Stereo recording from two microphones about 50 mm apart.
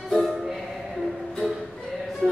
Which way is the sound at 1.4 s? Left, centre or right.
Right.